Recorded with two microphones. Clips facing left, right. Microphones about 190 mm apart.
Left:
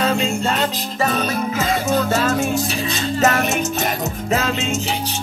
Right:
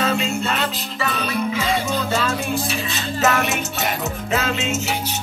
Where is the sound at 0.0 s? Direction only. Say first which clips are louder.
Left 2 dB; 35° left (ahead or behind).